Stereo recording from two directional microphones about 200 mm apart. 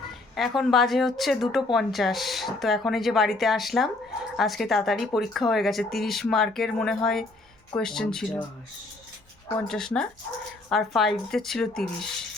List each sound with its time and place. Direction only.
0.1 s speech: centre (ahead or behind)
9.6 s speech: centre (ahead or behind)